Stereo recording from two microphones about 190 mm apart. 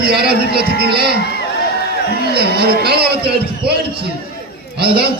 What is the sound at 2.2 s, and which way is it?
A man's voice, 55° right (ahead or behind).